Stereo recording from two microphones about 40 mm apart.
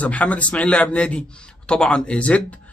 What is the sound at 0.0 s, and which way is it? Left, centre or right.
A man's voice, left.